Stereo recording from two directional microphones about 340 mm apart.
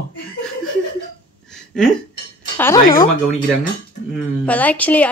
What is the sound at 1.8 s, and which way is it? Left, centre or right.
Speech, centre.